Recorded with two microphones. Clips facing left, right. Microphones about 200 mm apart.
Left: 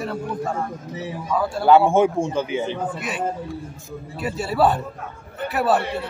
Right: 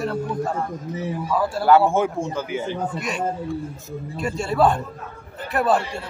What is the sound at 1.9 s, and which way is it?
Speech, 15° left (ahead or behind).